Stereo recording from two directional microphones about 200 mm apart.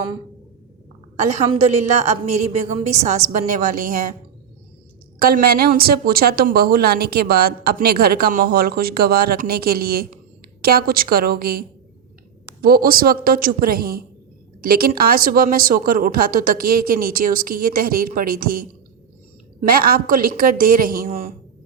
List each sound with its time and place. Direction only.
1.2 s a woman's voice: 35° right (ahead or behind)
5.2 s a woman's voice: 50° right (ahead or behind)
12.6 s a woman's voice: 45° right (ahead or behind)
19.6 s a woman's voice: 45° right (ahead or behind)